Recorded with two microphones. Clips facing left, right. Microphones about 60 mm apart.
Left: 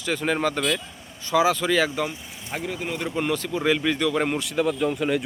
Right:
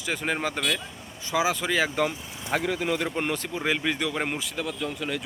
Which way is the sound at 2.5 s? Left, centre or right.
Right.